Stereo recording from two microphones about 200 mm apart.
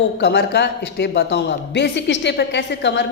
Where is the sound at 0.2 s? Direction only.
55° left (ahead or behind).